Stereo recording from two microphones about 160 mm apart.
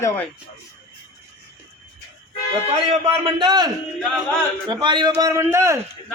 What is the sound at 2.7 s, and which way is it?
A man's voice, 35° right (ahead or behind).